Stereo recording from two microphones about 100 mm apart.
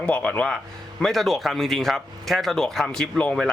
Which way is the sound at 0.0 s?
10° left (ahead or behind).